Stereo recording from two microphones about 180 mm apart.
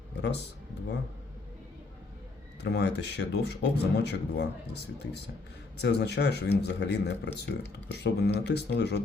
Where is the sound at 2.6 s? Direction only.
70° left (ahead or behind).